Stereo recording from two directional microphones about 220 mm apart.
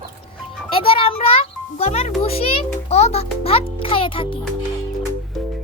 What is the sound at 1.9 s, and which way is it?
Music, 30° left (ahead or behind).